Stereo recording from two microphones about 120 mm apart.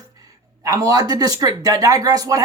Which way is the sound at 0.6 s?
30° right (ahead or behind).